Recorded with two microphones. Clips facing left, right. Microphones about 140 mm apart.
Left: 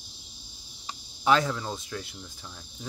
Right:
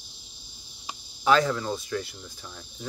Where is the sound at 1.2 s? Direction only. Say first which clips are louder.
Right 2 dB; 20° left (ahead or behind).